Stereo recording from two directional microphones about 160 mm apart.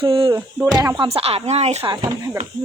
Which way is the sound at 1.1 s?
40° right (ahead or behind).